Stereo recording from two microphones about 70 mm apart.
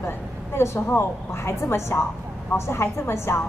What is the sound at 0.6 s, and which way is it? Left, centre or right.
A woman's voice, left.